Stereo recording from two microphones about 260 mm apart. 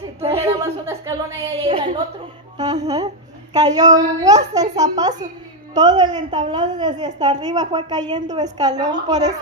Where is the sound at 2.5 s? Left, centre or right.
Centre.